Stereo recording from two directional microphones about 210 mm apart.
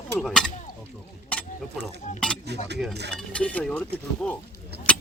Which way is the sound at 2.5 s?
55° right (ahead or behind).